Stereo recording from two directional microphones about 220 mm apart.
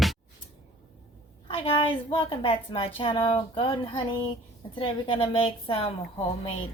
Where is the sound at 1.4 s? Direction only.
25° left (ahead or behind).